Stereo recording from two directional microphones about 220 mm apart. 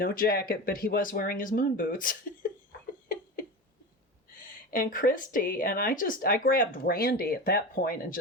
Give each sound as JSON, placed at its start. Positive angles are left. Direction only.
{"t": 0.0, "sound": "speech", "side_deg": 40}
{"t": 4.7, "sound": "speech", "side_deg": 40}